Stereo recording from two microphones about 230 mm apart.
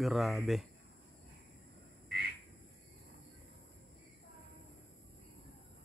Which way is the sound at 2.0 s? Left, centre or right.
Right.